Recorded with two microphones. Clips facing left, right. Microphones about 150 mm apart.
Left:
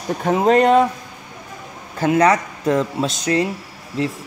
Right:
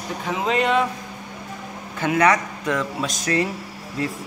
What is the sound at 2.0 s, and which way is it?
Speech, 30° left (ahead or behind).